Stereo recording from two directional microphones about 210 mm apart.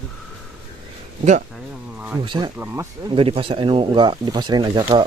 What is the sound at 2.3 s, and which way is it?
Speech, 20° right (ahead or behind).